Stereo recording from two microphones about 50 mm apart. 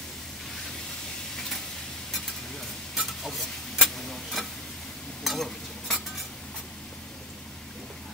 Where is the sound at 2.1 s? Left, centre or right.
Centre.